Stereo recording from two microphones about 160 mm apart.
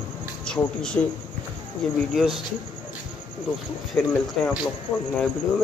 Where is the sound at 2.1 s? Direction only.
Centre (ahead or behind).